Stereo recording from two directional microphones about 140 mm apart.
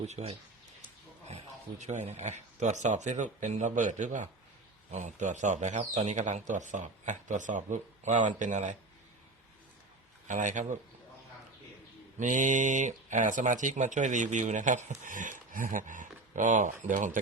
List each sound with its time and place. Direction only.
0.0 s speech: 50° right (ahead or behind)
10.2 s speech: 60° right (ahead or behind)
12.2 s speech: 65° right (ahead or behind)